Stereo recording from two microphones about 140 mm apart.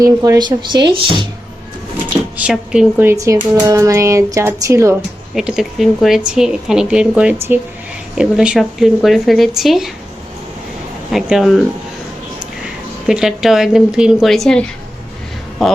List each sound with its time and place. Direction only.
0.0 s speech: 25° right (ahead or behind)
2.4 s speech: 5° right (ahead or behind)
3.1 s speech: 20° right (ahead or behind)
5.3 s speech: 5° right (ahead or behind)
11.1 s speech: centre (ahead or behind)
13.1 s speech: 5° right (ahead or behind)